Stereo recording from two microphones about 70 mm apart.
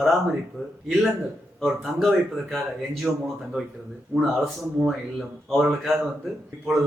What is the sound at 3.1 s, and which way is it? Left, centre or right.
Speech, centre.